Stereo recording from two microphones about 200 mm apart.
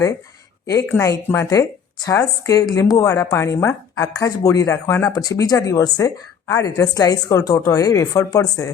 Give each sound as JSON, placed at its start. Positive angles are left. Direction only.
{"t": 0.7, "sound": "speech", "side_deg": 15}